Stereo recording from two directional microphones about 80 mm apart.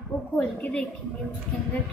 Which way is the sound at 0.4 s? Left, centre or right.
Centre.